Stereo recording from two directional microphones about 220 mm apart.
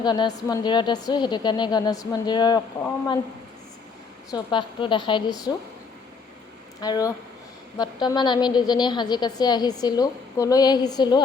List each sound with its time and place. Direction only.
0.0 s a woman's voice: 20° left (ahead or behind)
4.3 s a woman's voice: 20° left (ahead or behind)
6.8 s a woman's voice: 15° left (ahead or behind)